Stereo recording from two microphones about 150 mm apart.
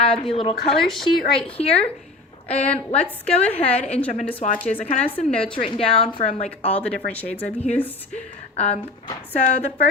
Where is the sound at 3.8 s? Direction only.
45° left (ahead or behind).